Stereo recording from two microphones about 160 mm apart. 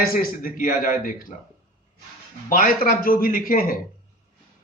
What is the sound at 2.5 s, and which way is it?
A man's voice, 60° left (ahead or behind).